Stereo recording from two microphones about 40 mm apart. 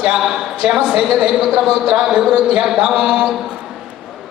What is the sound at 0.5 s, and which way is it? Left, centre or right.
Speech, centre.